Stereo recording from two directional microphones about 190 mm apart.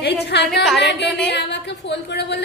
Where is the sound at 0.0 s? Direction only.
60° left (ahead or behind).